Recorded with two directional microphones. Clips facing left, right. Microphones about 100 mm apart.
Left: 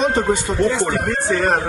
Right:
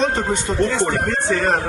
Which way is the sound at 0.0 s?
15° left (ahead or behind).